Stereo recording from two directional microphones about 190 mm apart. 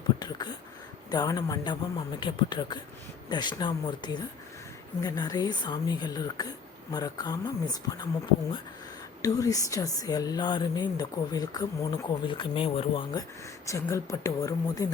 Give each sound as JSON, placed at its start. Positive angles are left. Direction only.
{"t": 1.1, "sound": "speech", "side_deg": 20}
{"t": 9.2, "sound": "speech", "side_deg": 20}
{"t": 13.7, "sound": "speech", "side_deg": 15}